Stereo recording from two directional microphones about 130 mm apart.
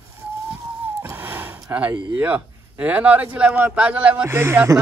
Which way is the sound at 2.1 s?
10° right (ahead or behind).